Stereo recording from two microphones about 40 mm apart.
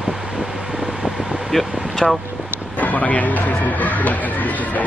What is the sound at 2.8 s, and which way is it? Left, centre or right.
Speech, left.